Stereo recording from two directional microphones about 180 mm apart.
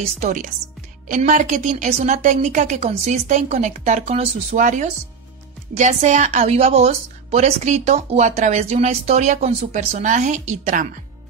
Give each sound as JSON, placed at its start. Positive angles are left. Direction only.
{"t": 0.2, "sound": "a woman's voice", "side_deg": -45}